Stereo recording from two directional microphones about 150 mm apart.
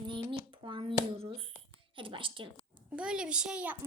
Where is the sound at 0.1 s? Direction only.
30° right (ahead or behind).